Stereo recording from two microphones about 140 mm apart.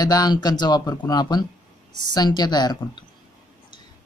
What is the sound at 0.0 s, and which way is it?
Speech, 30° left (ahead or behind).